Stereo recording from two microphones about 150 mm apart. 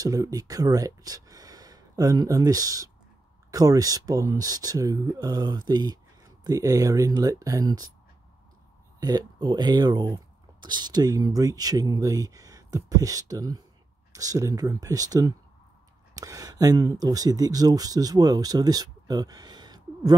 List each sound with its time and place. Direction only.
0.0 s speech: 25° right (ahead or behind)
9.0 s speech: 25° right (ahead or behind)